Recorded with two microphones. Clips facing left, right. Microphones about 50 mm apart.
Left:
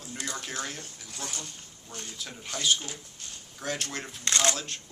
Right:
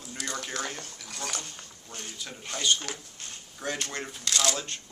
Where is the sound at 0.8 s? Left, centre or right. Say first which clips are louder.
Right 2 dB; right.